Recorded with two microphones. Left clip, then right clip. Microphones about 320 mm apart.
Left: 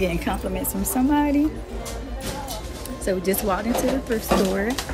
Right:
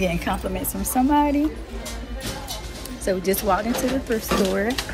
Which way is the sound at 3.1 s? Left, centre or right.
Centre.